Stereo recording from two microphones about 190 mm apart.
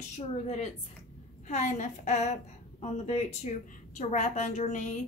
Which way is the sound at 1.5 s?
40° left (ahead or behind).